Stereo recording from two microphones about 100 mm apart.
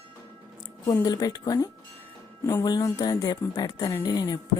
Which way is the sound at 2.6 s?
40° left (ahead or behind).